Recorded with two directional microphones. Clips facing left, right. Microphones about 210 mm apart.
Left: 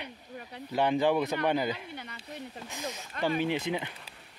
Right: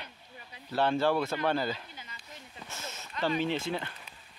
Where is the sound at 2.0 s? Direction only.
65° left (ahead or behind).